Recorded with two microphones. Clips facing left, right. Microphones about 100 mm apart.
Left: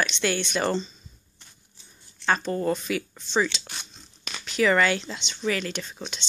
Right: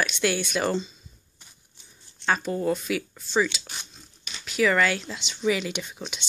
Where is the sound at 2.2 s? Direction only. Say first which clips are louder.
Left 1 dB; 5° right (ahead or behind).